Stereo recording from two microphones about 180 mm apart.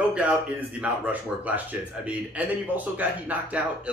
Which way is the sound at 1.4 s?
10° right (ahead or behind).